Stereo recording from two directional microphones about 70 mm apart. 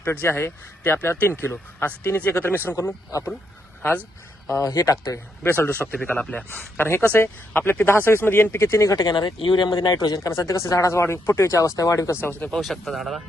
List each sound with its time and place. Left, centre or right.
0.0 s a man's voice: left
2.7 s speech: left
4.4 s speech: left
5.4 s a man's voice: left; by 6.4 s centre
6.5 s a man's voice: left
9.0 s speech: left
12.2 s a man's voice: left
12.5 s speech: centre